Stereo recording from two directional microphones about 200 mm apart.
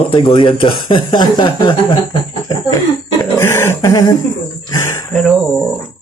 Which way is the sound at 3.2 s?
10° left (ahead or behind).